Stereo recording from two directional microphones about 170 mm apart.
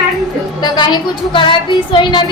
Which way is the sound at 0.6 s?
25° left (ahead or behind).